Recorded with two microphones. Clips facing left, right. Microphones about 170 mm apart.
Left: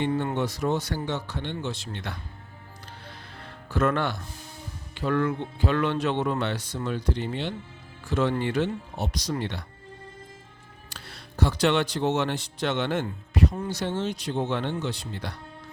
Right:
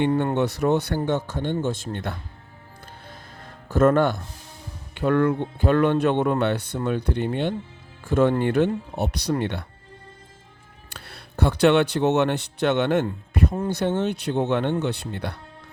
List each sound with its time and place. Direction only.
0.0 s speech: 55° right (ahead or behind)
3.1 s music: 45° right (ahead or behind)
4.9 s speech: 55° right (ahead or behind)
11.3 s speech: 60° right (ahead or behind)